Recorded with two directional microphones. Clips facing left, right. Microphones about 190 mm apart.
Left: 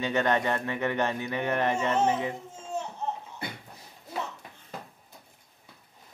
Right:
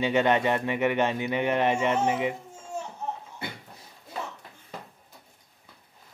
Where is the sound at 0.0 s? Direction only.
15° right (ahead or behind).